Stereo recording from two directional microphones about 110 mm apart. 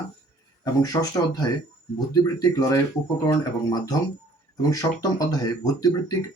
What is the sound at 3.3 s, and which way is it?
Speech, 40° left (ahead or behind).